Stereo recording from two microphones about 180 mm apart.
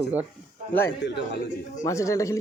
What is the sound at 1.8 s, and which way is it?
Speech, 15° left (ahead or behind).